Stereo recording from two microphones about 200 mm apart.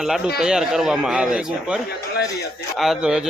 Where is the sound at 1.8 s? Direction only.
55° left (ahead or behind).